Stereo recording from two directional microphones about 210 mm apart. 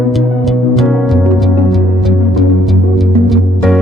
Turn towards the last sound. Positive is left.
turn(degrees=0)  # may be behind; listen again after turning